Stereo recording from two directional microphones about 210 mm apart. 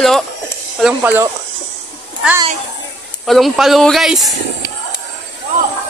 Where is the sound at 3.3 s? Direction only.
Centre (ahead or behind).